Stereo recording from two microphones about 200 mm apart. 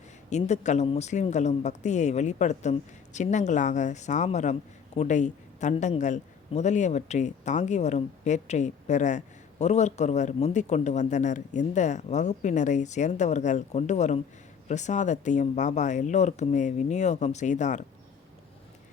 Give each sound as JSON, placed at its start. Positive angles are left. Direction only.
{"t": 0.3, "sound": "a man's voice", "side_deg": 35}